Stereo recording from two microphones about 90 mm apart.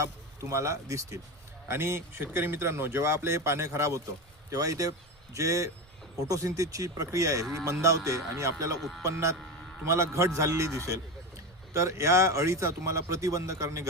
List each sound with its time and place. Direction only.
0.5 s a man's voice: 35° right (ahead or behind)